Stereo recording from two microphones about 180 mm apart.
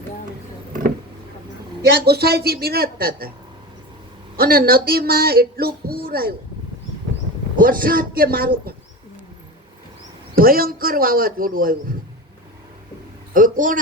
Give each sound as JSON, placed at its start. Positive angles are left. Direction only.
{"t": 2.0, "sound": "speech", "side_deg": -60}
{"t": 4.4, "sound": "speech", "side_deg": -55}
{"t": 7.5, "sound": "a man's voice", "side_deg": -50}
{"t": 10.3, "sound": "a man's voice", "side_deg": -55}
{"t": 13.3, "sound": "a man's voice", "side_deg": -50}